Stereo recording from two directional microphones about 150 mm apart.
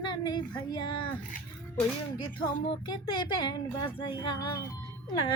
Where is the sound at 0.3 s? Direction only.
30° left (ahead or behind).